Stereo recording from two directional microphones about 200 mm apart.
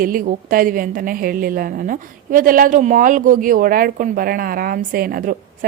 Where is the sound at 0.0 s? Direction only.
45° right (ahead or behind).